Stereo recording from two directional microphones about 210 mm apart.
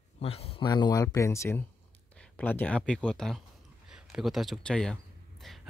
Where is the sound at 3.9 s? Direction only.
5° right (ahead or behind).